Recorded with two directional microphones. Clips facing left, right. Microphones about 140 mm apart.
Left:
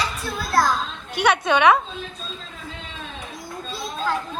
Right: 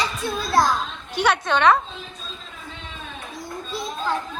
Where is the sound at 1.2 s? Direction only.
10° left (ahead or behind).